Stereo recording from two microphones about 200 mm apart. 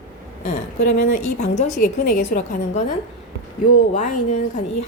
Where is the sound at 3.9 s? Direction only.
35° left (ahead or behind).